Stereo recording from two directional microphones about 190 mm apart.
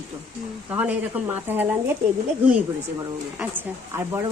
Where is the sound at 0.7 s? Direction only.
10° right (ahead or behind).